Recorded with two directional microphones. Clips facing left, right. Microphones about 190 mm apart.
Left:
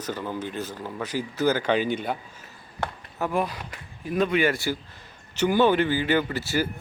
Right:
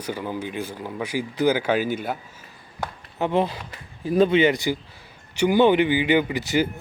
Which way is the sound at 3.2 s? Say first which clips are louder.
Right 4 dB; 25° right (ahead or behind).